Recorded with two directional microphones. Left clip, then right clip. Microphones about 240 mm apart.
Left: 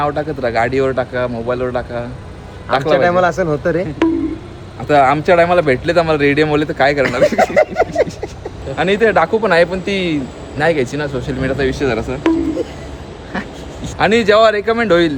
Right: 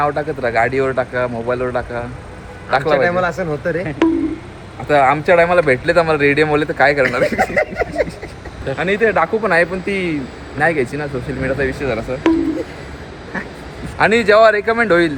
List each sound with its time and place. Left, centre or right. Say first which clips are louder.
0.0 s speech: even; centre
3.1 s speech: left 4 dB; centre
4.9 s speech: left 1 dB; centre
7.3 s speech: left 4 dB; centre
8.8 s speech: left 3 dB; centre
14.0 s speech: even; centre